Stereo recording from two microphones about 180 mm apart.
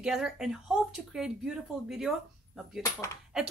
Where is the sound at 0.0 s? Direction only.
Centre (ahead or behind).